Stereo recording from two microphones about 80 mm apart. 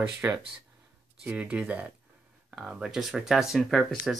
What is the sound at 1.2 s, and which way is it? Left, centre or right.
Speech, centre.